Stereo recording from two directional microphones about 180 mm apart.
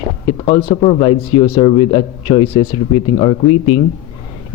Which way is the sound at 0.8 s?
30° left (ahead or behind).